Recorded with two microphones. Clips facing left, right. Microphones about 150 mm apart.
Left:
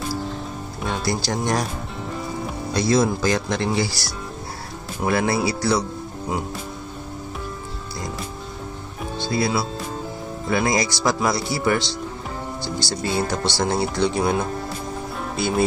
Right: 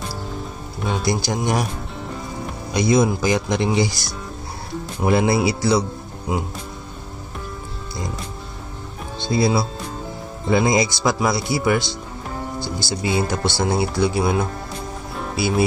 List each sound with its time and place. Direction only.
0.7 s music: 5° right (ahead or behind)
1.0 s speech: 15° right (ahead or behind)
2.7 s speech: 15° right (ahead or behind)
5.0 s speech: 20° right (ahead or behind)
9.2 s speech: 20° right (ahead or behind)
13.0 s speech: 15° right (ahead or behind)
15.1 s music: 5° right (ahead or behind)